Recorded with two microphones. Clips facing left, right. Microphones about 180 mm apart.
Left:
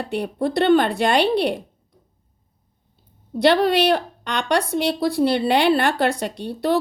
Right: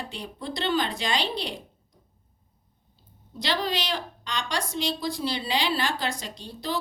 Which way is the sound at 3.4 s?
60° left (ahead or behind).